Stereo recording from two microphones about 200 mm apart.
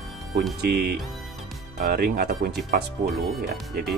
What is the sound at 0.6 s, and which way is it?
Speech, 50° right (ahead or behind).